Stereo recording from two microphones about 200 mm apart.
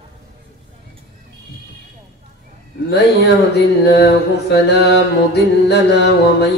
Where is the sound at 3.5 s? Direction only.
55° left (ahead or behind).